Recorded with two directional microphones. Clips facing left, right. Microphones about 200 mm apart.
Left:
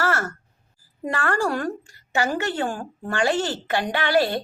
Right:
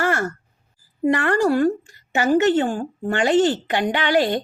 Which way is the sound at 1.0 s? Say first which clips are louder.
Right 6 dB; 20° right (ahead or behind).